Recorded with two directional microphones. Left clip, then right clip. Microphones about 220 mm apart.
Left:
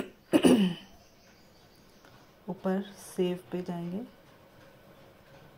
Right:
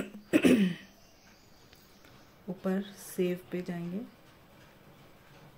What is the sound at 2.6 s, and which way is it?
A woman's voice, 5° right (ahead or behind).